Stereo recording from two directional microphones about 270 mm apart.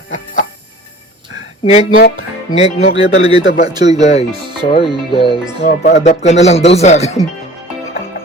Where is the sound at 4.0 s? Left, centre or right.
Left.